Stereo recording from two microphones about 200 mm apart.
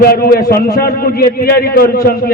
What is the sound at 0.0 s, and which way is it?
A man's voice, 50° left (ahead or behind).